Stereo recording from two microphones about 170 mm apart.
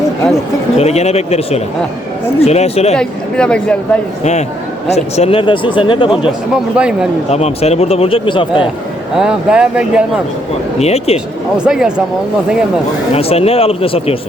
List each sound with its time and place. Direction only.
0.8 s speech: 40° left (ahead or behind)
2.9 s a woman's voice: 5° left (ahead or behind)
4.2 s speech: 40° left (ahead or behind)
6.5 s a woman's voice: 5° right (ahead or behind)
7.3 s speech: 40° left (ahead or behind)
9.1 s a woman's voice: 5° right (ahead or behind)
10.8 s speech: 40° left (ahead or behind)
11.5 s a woman's voice: 5° right (ahead or behind)
13.1 s speech: 35° left (ahead or behind)